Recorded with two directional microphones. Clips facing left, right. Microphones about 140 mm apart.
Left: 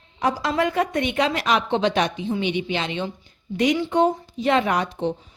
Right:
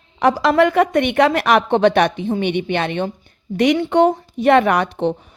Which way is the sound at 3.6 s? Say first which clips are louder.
Right 5 dB; 65° right (ahead or behind).